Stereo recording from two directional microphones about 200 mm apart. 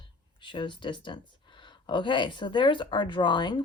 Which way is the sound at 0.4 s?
25° left (ahead or behind).